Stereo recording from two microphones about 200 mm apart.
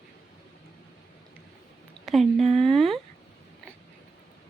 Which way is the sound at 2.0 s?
Centre (ahead or behind).